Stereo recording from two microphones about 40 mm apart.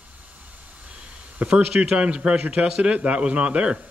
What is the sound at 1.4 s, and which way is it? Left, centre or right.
Speech, right.